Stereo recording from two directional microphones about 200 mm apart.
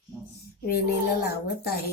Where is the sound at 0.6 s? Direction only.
50° left (ahead or behind).